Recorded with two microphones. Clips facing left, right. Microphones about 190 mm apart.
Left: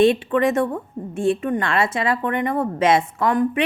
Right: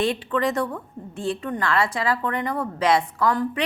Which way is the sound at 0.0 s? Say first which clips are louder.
Left 7 dB; 20° left (ahead or behind).